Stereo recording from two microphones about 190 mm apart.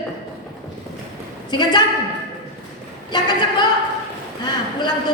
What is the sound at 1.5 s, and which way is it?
Speech, 25° left (ahead or behind).